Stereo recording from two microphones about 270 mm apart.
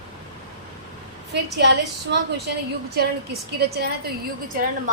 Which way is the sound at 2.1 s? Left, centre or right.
Right.